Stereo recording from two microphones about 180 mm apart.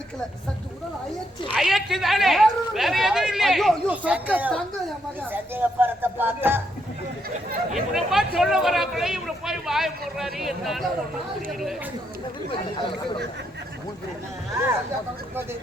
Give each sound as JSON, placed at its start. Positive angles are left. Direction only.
{"t": 1.5, "sound": "speech", "side_deg": 0}
{"t": 7.7, "sound": "speech", "side_deg": 0}
{"t": 12.5, "sound": "speech", "side_deg": 30}